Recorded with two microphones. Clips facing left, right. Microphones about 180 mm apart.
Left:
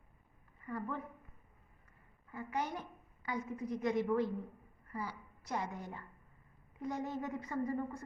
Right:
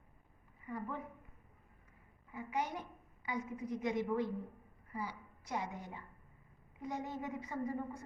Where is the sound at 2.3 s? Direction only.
15° right (ahead or behind).